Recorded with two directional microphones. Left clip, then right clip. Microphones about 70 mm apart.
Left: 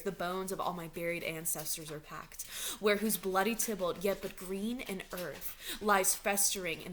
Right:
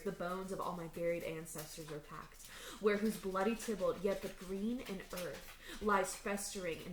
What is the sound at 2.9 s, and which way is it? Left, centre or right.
Speech, left.